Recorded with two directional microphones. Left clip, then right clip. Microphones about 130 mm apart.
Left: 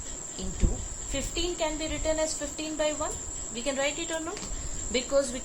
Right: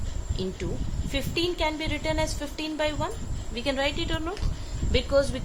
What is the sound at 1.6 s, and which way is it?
A woman's voice, 55° right (ahead or behind).